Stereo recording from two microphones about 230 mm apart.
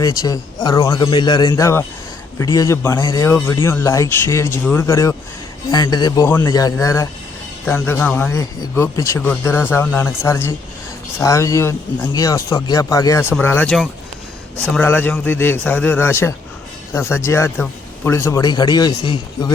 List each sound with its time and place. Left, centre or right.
0.0 s speech: centre